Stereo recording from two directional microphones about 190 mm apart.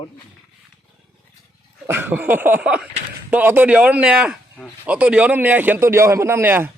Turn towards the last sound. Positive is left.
turn(degrees=-10)  # may be behind; listen again after turning